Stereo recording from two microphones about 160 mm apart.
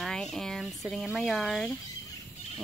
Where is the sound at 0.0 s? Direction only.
5° left (ahead or behind).